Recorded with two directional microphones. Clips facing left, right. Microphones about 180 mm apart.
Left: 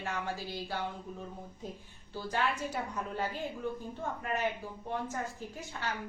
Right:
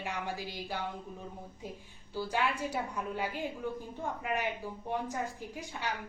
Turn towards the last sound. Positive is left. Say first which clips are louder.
# right 1 dB
turn(degrees=-15)  # may be behind; listen again after turning